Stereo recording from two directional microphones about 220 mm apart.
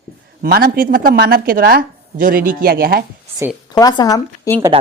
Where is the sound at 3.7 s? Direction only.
20° left (ahead or behind).